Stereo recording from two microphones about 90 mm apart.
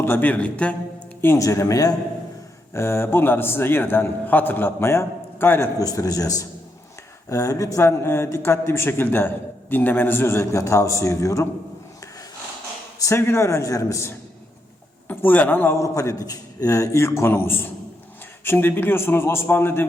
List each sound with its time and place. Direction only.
0.0 s a man's voice: 20° left (ahead or behind)
1.4 s a man's voice: 40° left (ahead or behind)
2.7 s a man's voice: 30° left (ahead or behind)
5.8 s a man's voice: 40° left (ahead or behind)
7.9 s a man's voice: 30° left (ahead or behind)
13.0 s a man's voice: 30° left (ahead or behind)
15.7 s a man's voice: 35° left (ahead or behind)